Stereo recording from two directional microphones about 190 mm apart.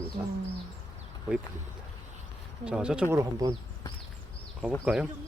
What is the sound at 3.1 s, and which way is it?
Speech, 15° right (ahead or behind).